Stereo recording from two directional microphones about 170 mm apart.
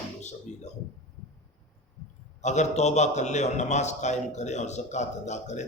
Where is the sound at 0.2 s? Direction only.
45° left (ahead or behind).